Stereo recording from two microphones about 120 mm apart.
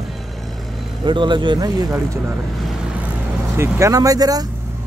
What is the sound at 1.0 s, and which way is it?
Speech, 40° right (ahead or behind).